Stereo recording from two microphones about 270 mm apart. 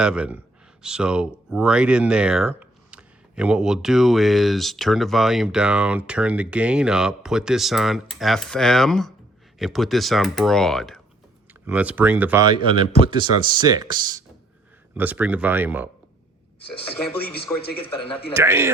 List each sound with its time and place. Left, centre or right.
0.0 s speech: centre
17.7 s speech: centre
18.3 s speech: centre